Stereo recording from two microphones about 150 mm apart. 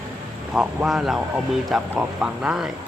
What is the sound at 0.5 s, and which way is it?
A man's voice, 5° right (ahead or behind).